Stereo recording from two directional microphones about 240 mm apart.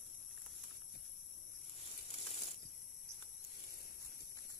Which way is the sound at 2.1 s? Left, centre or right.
Left.